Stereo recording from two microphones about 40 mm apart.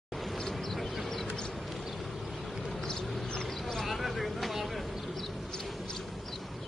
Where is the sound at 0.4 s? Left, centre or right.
Centre.